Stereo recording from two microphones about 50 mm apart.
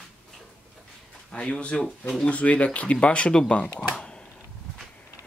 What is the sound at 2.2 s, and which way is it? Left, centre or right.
Speech, left.